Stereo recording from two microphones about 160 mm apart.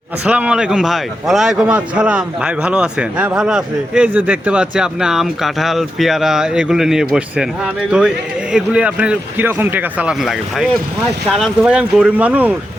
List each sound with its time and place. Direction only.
0.3 s a man's voice: 5° right (ahead or behind)